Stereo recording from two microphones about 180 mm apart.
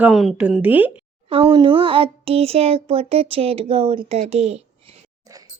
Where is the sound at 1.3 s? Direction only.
30° right (ahead or behind).